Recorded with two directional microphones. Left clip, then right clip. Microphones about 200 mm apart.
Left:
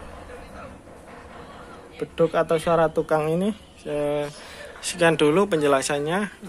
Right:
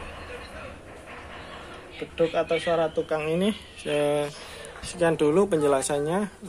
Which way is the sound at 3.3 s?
10° left (ahead or behind).